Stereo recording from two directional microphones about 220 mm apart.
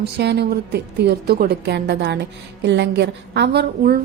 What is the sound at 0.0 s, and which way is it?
A woman's voice, 50° right (ahead or behind).